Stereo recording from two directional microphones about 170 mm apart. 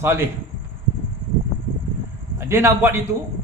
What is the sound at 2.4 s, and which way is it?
Speech, 15° right (ahead or behind).